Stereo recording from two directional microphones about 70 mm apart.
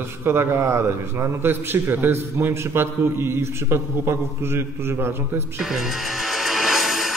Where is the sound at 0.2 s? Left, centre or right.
Right.